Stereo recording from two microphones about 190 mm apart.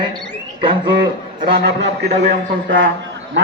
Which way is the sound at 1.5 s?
65° right (ahead or behind).